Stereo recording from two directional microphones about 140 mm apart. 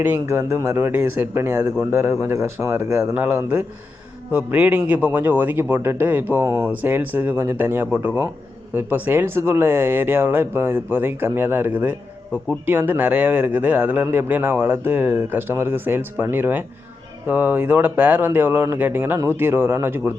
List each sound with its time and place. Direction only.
0.0 s a man's voice: 15° right (ahead or behind)